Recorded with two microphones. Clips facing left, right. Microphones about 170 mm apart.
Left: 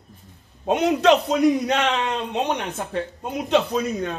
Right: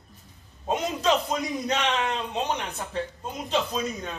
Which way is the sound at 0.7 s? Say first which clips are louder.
Left 7 dB; 70° left (ahead or behind).